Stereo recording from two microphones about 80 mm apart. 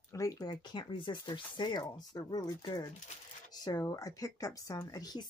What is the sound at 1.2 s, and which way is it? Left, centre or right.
Speech, left.